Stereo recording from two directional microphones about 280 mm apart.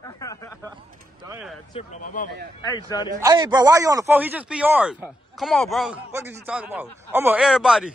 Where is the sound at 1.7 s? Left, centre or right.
Left.